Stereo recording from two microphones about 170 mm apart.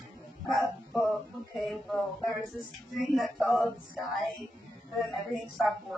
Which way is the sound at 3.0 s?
Centre (ahead or behind).